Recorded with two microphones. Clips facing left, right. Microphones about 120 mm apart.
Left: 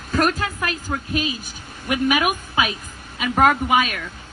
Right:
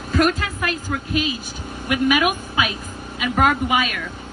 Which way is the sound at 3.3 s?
35° left (ahead or behind).